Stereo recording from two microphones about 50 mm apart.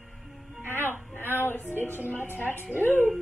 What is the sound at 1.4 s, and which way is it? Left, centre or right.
Music, left.